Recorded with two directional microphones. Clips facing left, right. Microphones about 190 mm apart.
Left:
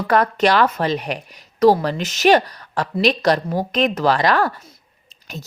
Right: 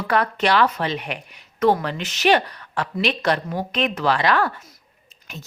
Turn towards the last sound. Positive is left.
turn(degrees=40)  # may be behind; listen again after turning